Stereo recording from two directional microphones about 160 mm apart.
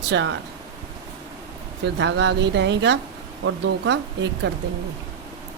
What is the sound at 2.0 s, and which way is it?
Speech, 90° right.